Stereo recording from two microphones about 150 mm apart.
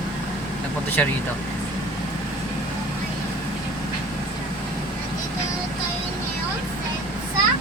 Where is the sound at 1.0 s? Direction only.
10° left (ahead or behind).